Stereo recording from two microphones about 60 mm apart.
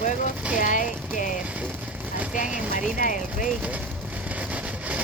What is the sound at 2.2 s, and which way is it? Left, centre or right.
Speech, right.